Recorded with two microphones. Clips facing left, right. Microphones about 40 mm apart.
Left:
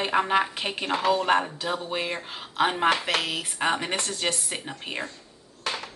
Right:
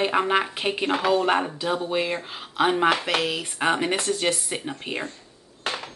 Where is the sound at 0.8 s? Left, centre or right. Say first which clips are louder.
Right 2 dB; right.